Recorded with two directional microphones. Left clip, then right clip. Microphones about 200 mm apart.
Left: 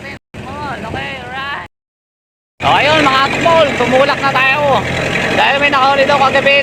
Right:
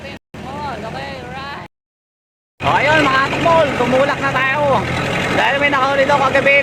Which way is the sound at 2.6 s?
Centre (ahead or behind).